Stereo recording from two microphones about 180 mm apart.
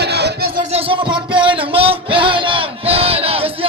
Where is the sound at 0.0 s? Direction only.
65° right (ahead or behind).